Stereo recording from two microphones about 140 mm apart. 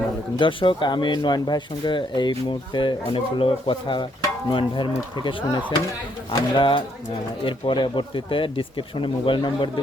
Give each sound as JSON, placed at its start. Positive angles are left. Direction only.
{"t": 0.3, "sound": "speech", "side_deg": 40}
{"t": 6.6, "sound": "speech", "side_deg": 35}